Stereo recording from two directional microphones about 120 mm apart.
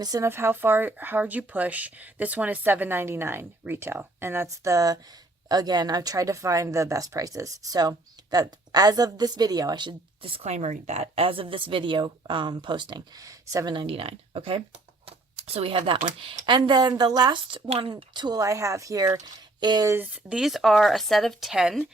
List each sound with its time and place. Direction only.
0.0 s speech: 30° right (ahead or behind)
0.3 s speech: 20° right (ahead or behind)
13.7 s speech: 50° right (ahead or behind)
17.9 s speech: 35° right (ahead or behind)
20.3 s speech: centre (ahead or behind)